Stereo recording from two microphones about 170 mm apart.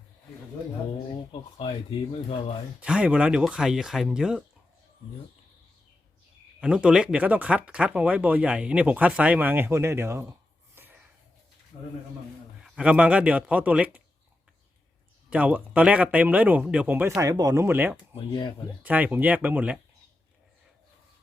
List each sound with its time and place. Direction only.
1.3 s speech: 35° left (ahead or behind)
2.8 s speech: 5° right (ahead or behind)
6.6 s speech: 5° right (ahead or behind)
10.8 s a sound: 10° right (ahead or behind)
12.6 s speech: 5° right (ahead or behind)
15.3 s speech: 10° right (ahead or behind)
18.1 s speech: 25° left (ahead or behind)
18.8 s speech: 10° right (ahead or behind)